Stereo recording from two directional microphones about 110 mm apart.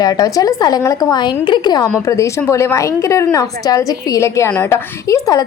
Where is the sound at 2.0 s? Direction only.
25° left (ahead or behind).